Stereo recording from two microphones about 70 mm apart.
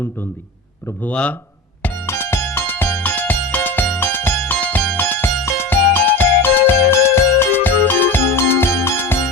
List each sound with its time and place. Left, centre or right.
1.0 s speech: centre
2.0 s music: left
6.7 s music: left